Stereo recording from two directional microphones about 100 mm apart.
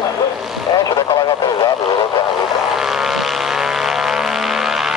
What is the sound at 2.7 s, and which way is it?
Vehicle, 5° right (ahead or behind).